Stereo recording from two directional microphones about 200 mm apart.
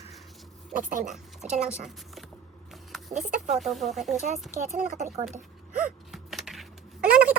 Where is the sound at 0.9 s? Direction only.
40° right (ahead or behind).